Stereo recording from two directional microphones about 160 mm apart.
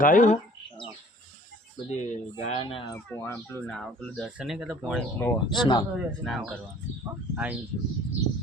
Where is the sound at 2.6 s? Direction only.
30° left (ahead or behind).